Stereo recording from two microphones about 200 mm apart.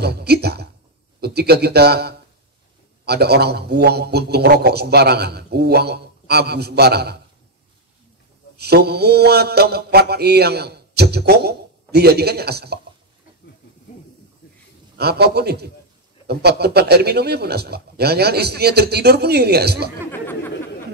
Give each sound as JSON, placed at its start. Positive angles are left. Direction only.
{"t": 0.0, "sound": "mantra", "side_deg": -55}
{"t": 1.2, "sound": "a man's voice", "side_deg": -55}
{"t": 3.1, "sound": "mantra", "side_deg": -55}
{"t": 8.5, "sound": "mantra", "side_deg": -55}
{"t": 15.0, "sound": "mantra", "side_deg": -55}
{"t": 20.1, "sound": "a sound", "side_deg": 10}